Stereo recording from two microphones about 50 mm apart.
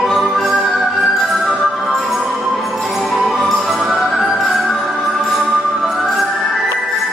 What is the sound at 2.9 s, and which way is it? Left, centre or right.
Music, centre.